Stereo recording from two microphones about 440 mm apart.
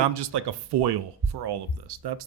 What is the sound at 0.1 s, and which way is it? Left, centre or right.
Speech, right.